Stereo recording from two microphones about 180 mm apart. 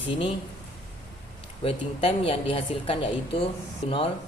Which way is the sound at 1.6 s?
30° left (ahead or behind).